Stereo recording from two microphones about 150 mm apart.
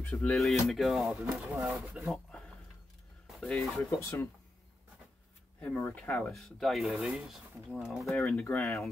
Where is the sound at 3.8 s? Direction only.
20° left (ahead or behind).